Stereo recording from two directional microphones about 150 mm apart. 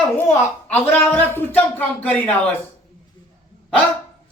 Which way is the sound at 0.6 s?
10° left (ahead or behind).